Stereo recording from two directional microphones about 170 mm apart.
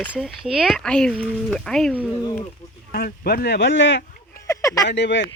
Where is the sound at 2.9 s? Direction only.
65° left (ahead or behind); by 4.1 s 90° left.